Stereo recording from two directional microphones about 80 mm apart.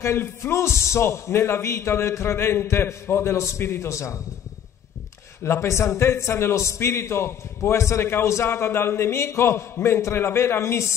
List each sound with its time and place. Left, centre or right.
0.0 s a man's voice: left
5.4 s a man's voice: left